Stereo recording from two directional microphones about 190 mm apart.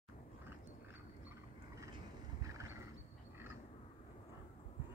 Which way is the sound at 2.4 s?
15° right (ahead or behind).